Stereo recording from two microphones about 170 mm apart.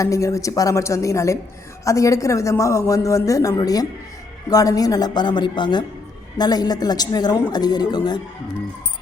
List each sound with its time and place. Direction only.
0.0 s a woman's voice: 20° left (ahead or behind)